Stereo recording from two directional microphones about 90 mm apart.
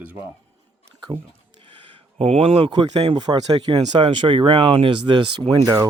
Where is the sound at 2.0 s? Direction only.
90° right.